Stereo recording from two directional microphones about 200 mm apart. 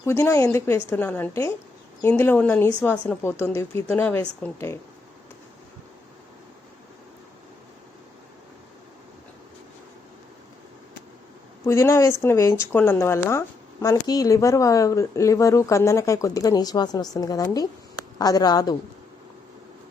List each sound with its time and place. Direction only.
0.0 s speech: 15° left (ahead or behind)
11.6 s speech: 15° left (ahead or behind)